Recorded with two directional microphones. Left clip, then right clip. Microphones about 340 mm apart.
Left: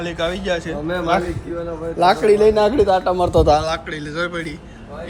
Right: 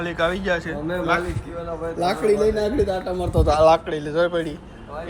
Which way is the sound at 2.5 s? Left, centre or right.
Centre.